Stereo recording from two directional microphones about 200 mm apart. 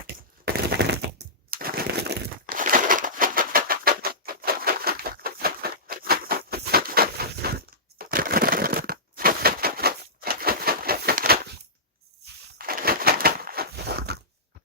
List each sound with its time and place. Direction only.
0.4 s a sound: 55° right (ahead or behind)
7.9 s crushing: 45° right (ahead or behind)
12.5 s crushing: 50° right (ahead or behind)